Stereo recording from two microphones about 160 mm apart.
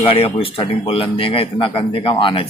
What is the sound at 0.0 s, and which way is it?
Speech, 35° left (ahead or behind).